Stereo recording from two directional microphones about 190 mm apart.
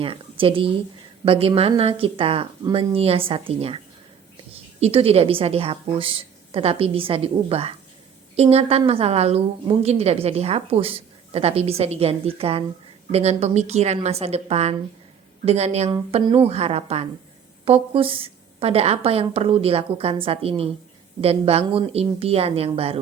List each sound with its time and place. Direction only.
0.0 s a woman's voice: 30° right (ahead or behind)
4.8 s a woman's voice: 30° right (ahead or behind)